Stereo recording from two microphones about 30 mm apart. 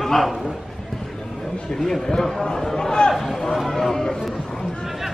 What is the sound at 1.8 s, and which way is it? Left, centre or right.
A man's voice, centre.